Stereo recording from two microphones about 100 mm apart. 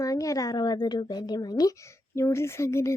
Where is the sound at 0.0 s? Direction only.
35° left (ahead or behind).